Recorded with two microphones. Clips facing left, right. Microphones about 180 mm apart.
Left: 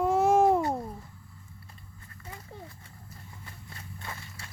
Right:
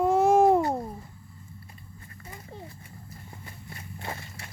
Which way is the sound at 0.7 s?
10° right (ahead or behind).